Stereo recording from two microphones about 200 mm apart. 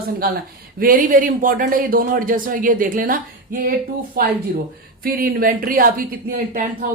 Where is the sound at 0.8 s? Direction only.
45° right (ahead or behind).